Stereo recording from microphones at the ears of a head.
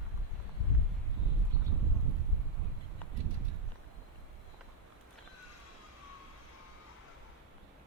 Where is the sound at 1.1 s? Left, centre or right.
Right.